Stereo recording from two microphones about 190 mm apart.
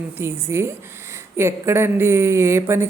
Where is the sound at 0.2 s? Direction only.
15° right (ahead or behind).